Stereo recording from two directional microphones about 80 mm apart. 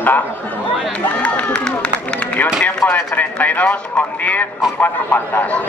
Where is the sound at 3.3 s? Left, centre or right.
Centre.